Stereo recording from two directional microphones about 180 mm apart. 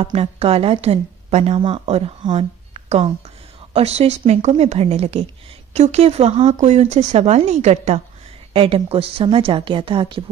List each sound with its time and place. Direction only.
0.0 s a woman's voice: 35° right (ahead or behind)